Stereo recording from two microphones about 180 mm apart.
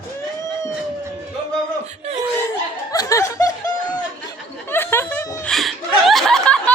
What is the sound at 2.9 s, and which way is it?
Chuckle, 20° left (ahead or behind).